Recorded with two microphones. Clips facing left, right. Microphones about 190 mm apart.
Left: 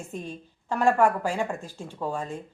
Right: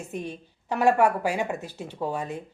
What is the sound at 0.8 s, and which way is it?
Speech, 5° right (ahead or behind).